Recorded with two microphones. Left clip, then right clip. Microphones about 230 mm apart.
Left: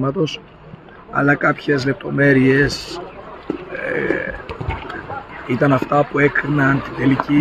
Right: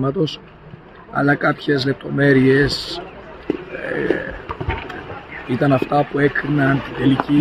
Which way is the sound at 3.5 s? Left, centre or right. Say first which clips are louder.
Right 3 dB; right.